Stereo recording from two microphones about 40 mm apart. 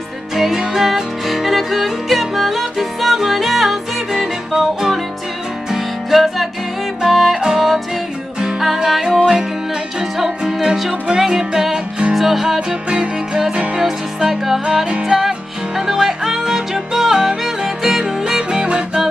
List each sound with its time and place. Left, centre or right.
0.4 s music: centre
7.4 s music: centre
8.7 s music: centre
10.4 s music: centre
12.5 s music: right
13.7 s music: centre